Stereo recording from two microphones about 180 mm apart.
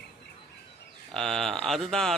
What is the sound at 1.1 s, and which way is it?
Speech, centre (ahead or behind).